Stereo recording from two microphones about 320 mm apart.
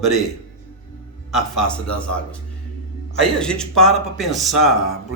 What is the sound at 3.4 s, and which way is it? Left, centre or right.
A man's voice, centre.